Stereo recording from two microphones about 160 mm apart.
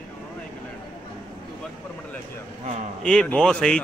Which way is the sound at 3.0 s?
5° left (ahead or behind).